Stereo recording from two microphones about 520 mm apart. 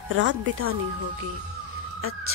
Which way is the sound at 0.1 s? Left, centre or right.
Right.